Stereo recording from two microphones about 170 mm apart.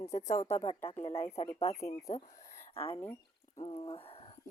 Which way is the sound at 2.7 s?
35° left (ahead or behind).